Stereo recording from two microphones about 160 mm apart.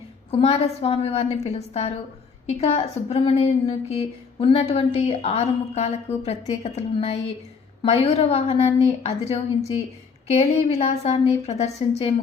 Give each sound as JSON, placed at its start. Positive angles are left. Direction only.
{"t": 0.3, "sound": "a woman's voice", "side_deg": 35}